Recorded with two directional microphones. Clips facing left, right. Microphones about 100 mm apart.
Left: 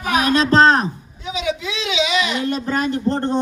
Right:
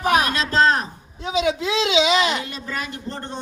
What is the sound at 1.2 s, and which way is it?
Speech, 35° right (ahead or behind).